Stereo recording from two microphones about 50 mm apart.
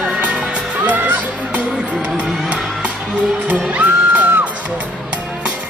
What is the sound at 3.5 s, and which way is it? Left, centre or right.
Music, right.